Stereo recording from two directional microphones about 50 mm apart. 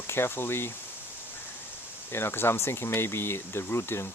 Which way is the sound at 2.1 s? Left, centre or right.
Left.